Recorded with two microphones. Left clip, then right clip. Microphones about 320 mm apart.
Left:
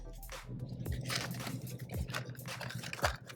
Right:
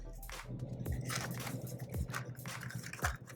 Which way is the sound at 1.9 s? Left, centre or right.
Centre.